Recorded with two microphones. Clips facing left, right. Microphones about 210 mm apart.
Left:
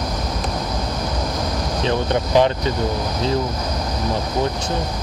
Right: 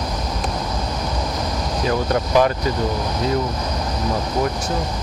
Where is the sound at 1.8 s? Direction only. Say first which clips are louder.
Even; 25° left (ahead or behind).